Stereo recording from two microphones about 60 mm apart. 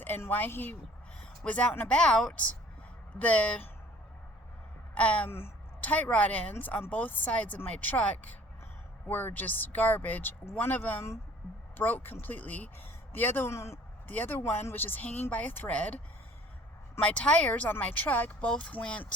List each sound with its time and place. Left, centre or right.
0.3 s speech: left
1.2 s a sound: left
1.9 s speech: centre
4.9 s speech: left
13.5 s speech: left
14.1 s speech: left
17.0 s speech: left
18.3 s speech: centre